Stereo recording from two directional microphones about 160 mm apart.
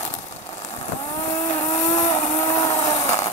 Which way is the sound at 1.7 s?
20° left (ahead or behind).